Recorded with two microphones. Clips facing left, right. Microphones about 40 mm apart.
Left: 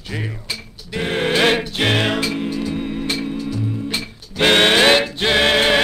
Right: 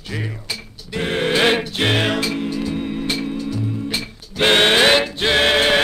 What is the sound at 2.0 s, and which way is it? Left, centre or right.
Music, centre.